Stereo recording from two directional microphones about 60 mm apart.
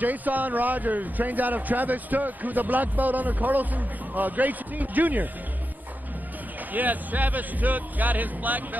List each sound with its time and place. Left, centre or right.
0.0 s a man's voice: right
6.7 s a man's voice: right